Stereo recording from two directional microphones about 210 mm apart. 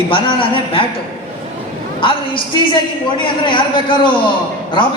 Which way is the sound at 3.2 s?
25° left (ahead or behind).